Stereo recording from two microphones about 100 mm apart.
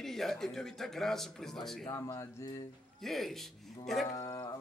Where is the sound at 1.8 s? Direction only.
35° left (ahead or behind).